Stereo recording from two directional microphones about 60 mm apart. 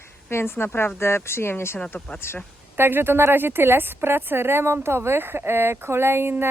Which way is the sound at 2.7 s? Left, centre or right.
Right.